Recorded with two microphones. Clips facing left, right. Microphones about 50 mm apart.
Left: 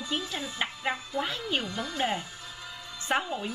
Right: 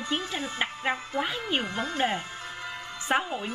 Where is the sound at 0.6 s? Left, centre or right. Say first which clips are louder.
Right 2 dB; right.